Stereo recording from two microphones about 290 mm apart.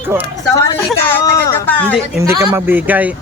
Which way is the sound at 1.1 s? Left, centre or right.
Centre.